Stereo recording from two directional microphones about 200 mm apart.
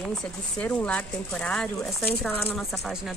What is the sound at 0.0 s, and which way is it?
A woman's voice, 5° left (ahead or behind).